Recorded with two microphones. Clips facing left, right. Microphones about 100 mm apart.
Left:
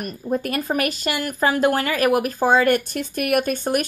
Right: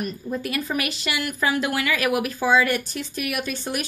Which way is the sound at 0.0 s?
50° left (ahead or behind).